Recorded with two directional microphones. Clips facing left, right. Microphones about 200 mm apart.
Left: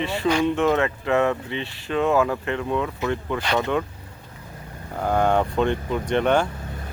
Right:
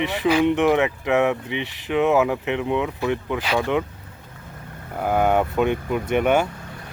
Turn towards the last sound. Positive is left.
turn(degrees=-10)  # may be behind; listen again after turning